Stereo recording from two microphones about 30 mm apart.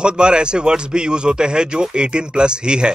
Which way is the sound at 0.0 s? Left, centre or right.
Right.